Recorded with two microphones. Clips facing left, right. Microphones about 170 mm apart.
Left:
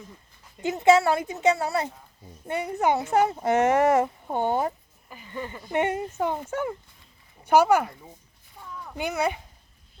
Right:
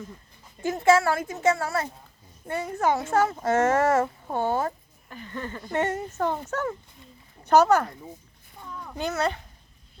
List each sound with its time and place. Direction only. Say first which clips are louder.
0.6 s a woman's voice: left 1 dB; 20° left (ahead or behind)
5.0 s speech: even; 5° left (ahead or behind)
9.0 s speech: even; 10° left (ahead or behind)